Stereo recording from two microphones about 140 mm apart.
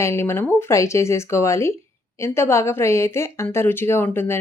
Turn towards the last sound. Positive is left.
turn(degrees=15)  # may be behind; listen again after turning